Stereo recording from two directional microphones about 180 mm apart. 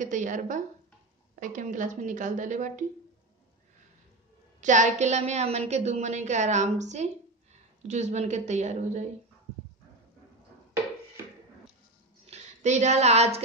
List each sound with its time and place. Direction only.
0.0 s speech: 45° right (ahead or behind)
4.6 s a woman's voice: 45° right (ahead or behind)
12.3 s a woman's voice: 40° right (ahead or behind)